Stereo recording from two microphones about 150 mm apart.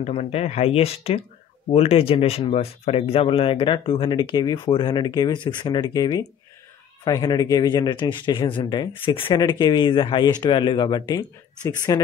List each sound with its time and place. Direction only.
0.0 s speech: 45° left (ahead or behind); by 12.0 s 25° left (ahead or behind)